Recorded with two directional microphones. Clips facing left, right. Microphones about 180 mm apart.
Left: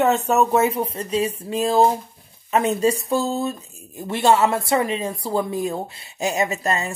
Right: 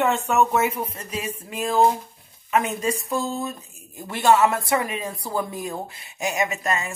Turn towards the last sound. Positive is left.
turn(degrees=30)  # may be behind; listen again after turning